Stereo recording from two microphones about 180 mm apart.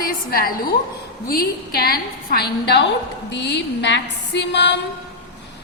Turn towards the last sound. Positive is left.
turn(degrees=70)  # may be behind; listen again after turning